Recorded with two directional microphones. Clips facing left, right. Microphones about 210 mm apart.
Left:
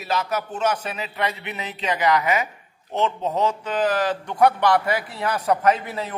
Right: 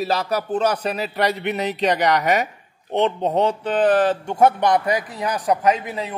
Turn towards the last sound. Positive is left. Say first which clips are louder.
# right 1 dB
turn(degrees=-15)  # may be behind; listen again after turning